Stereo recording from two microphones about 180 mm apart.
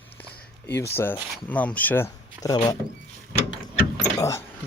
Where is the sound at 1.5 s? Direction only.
10° left (ahead or behind).